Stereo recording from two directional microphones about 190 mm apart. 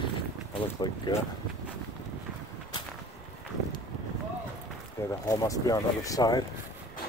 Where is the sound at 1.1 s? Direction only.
25° left (ahead or behind).